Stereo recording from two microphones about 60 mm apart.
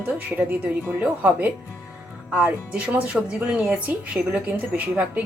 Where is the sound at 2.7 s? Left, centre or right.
Right.